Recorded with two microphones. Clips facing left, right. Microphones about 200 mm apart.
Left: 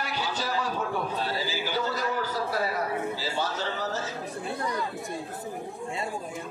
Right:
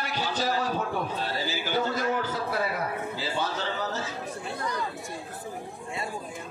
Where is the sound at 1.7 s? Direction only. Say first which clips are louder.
Right 4 dB; 50° right (ahead or behind).